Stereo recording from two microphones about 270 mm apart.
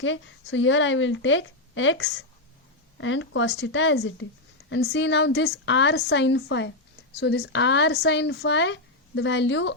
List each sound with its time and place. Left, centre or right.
0.0 s speech: left